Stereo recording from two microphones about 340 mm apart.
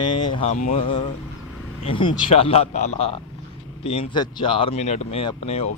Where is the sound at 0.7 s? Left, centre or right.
Centre.